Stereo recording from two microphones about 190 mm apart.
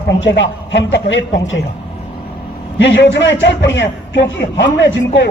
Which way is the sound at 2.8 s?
70° left (ahead or behind).